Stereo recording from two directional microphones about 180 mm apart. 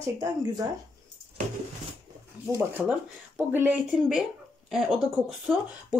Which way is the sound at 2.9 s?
10° right (ahead or behind).